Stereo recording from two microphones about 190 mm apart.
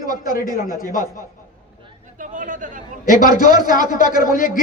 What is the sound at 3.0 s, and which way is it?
A man's voice, 45° left (ahead or behind).